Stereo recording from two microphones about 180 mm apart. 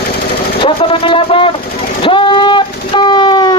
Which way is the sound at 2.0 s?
30° left (ahead or behind).